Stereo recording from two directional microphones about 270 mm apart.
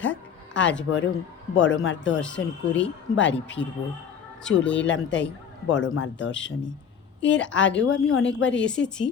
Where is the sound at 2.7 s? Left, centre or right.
Left.